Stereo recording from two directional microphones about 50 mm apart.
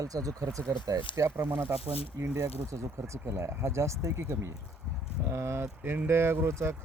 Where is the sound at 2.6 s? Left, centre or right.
Right.